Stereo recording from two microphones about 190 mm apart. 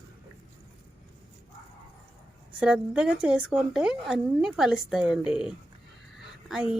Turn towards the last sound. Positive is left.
turn(degrees=-5)  # may be behind; listen again after turning